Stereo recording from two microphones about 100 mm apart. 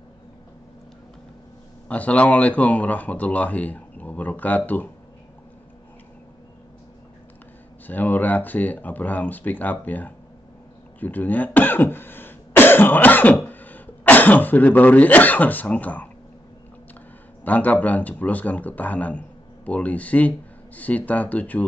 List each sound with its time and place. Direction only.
1.9 s speech: 15° left (ahead or behind)
7.8 s speech: 20° left (ahead or behind)
17.5 s speech: 15° left (ahead or behind)